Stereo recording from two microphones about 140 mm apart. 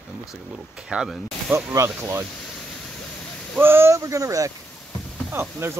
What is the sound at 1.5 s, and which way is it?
Speech, 20° right (ahead or behind).